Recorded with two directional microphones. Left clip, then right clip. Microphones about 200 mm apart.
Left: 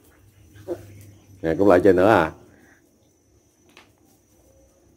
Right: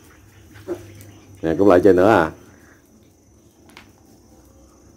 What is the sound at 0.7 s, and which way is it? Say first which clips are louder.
Dog: right 2 dB; 35° right (ahead or behind).